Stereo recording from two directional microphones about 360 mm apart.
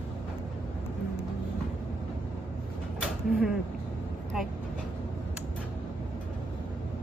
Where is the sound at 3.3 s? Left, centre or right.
Centre.